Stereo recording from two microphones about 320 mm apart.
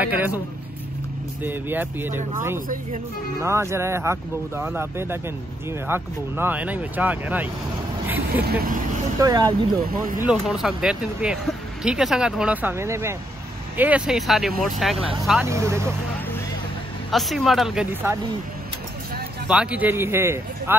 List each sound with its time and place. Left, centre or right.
0.0 s speech: centre
1.4 s speech: centre
3.4 s speech: centre
8.4 s speech: right
9.2 s speech: centre
9.8 s speech: right
10.2 s speech: centre
17.1 s speech: centre
19.4 s speech: centre